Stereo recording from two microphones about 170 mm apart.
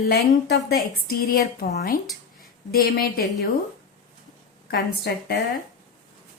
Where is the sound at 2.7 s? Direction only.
65° left (ahead or behind).